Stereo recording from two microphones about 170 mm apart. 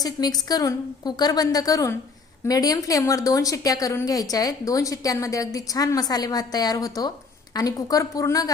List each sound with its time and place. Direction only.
0.0 s a woman's voice: 25° left (ahead or behind)